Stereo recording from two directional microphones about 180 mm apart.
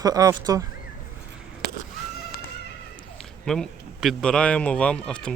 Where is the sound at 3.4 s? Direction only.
Centre (ahead or behind).